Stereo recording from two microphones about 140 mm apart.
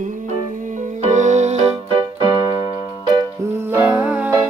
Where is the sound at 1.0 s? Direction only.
55° right (ahead or behind).